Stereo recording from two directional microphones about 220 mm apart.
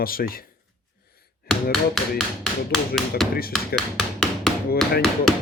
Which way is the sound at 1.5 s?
45° left (ahead or behind).